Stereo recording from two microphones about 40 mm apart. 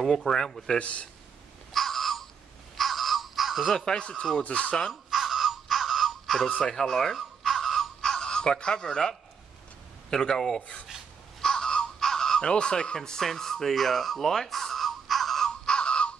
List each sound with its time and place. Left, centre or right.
0.2 s speech: centre
0.7 s speech: left
1.7 s a sound: centre
3.7 s speech: centre
4.4 s speech: left
5.1 s crow: centre
6.6 s speech: centre
7.2 s a sound: centre
8.0 s a sound: centre
10.0 s speech: centre
11.4 s crow: centre
12.4 s speech: left; by 15.5 s centre
15.6 s music: left